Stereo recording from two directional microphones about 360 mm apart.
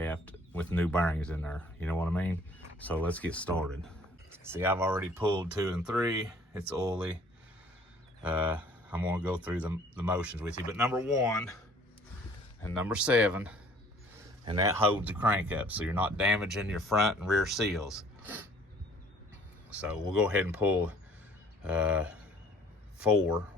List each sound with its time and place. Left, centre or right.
0.0 s speech: centre
8.2 s speech: centre
12.8 s speech: centre
19.7 s speech: centre